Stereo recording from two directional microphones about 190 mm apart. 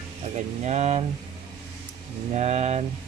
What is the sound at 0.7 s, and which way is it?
Speech, 35° right (ahead or behind).